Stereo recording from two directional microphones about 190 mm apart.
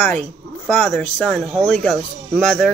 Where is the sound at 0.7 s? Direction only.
5° left (ahead or behind).